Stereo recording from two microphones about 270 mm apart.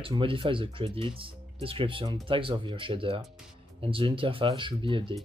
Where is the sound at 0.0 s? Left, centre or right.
Centre.